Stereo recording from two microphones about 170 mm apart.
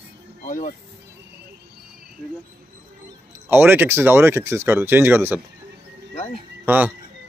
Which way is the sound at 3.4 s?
10° right (ahead or behind).